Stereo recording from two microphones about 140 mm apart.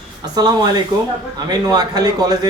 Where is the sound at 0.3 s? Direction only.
30° right (ahead or behind).